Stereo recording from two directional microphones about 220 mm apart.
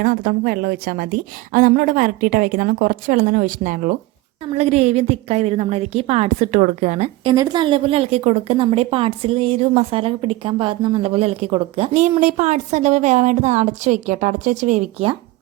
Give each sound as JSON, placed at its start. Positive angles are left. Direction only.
{"t": 0.0, "sound": "a woman's voice", "side_deg": -40}
{"t": 7.3, "sound": "a woman's voice", "side_deg": -20}